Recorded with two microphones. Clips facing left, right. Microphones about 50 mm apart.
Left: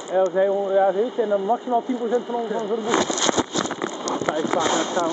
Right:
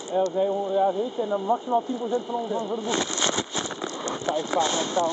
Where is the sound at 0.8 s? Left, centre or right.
Left.